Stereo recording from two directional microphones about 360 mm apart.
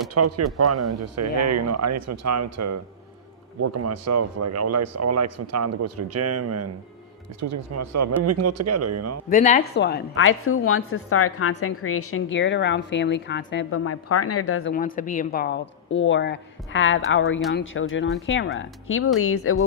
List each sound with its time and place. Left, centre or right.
0.1 s speech: right
9.3 s a woman's voice: left